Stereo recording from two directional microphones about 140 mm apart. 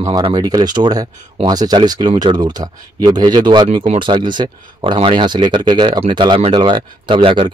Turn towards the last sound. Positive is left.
turn(degrees=-40)  # may be behind; listen again after turning